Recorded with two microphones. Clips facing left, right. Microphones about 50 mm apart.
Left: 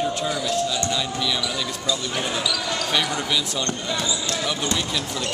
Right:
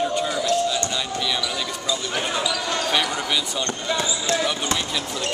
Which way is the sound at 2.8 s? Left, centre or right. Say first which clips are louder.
Even; centre.